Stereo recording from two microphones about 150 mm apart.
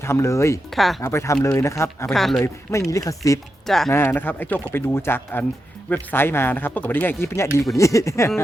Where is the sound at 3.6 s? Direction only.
Centre (ahead or behind).